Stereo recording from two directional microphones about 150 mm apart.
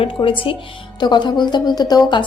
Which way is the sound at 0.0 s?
35° left (ahead or behind).